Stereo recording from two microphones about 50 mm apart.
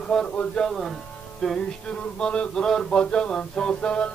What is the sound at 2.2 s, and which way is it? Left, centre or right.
Mantra, centre.